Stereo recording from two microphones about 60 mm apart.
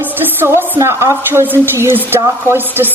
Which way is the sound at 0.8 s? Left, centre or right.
Right.